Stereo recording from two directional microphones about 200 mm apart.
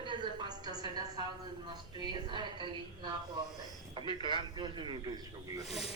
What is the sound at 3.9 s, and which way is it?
Snake, 25° right (ahead or behind).